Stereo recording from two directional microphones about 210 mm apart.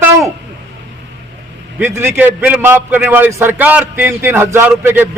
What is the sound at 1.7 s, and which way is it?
A man's voice, 10° right (ahead or behind).